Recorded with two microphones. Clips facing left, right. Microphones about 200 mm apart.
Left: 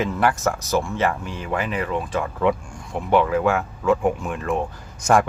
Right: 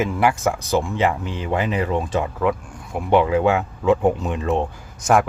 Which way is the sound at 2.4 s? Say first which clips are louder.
Left 1 dB; 5° right (ahead or behind).